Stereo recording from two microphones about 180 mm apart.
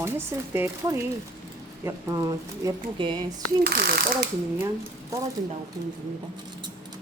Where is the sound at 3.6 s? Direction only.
60° right (ahead or behind).